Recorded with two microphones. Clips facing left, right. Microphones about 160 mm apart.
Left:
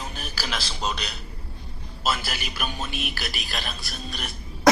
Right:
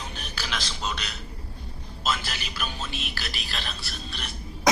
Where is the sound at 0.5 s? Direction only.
35° left (ahead or behind).